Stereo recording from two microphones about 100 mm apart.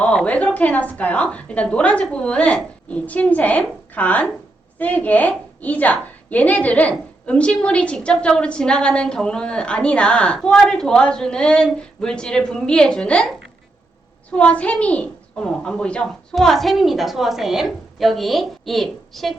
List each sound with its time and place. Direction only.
0.0 s a woman's voice: 10° left (ahead or behind)
14.3 s a child's voice: 15° left (ahead or behind)